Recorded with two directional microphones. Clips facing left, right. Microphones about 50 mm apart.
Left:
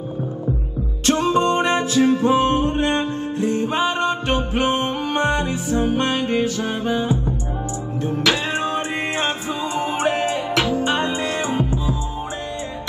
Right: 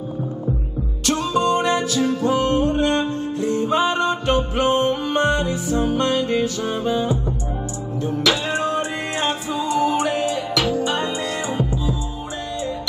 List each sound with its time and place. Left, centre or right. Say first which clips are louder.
1.0 s music: left 2 dB; left